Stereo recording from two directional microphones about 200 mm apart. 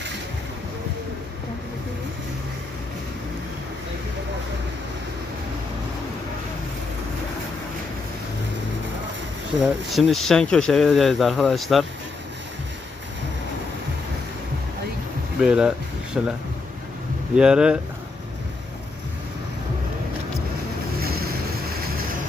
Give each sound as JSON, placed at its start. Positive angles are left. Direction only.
{"t": 9.9, "sound": "speech", "side_deg": 0}
{"t": 15.4, "sound": "speech", "side_deg": -5}
{"t": 17.3, "sound": "speech", "side_deg": -5}
{"t": 21.0, "sound": "boat", "side_deg": -50}